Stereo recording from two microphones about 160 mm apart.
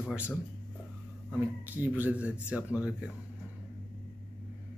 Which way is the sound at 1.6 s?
10° right (ahead or behind).